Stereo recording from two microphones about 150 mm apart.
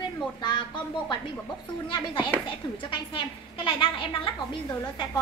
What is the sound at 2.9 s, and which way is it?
A woman's voice, 35° left (ahead or behind).